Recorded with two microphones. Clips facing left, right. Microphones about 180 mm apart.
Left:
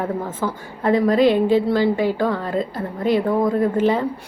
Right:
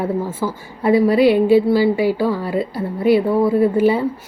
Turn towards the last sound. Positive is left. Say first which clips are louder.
# right 3 dB
turn(degrees=-10)  # may be behind; listen again after turning